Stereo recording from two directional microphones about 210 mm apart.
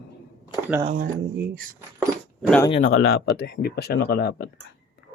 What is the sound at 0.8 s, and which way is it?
Speech, 40° right (ahead or behind).